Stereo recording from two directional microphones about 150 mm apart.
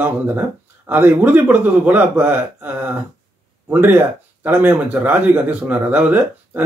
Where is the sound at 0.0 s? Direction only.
10° right (ahead or behind).